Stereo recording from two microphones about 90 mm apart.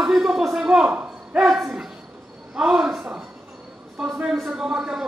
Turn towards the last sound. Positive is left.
turn(degrees=-5)  # may be behind; listen again after turning